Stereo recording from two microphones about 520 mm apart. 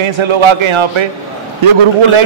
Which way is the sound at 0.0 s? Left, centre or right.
Right.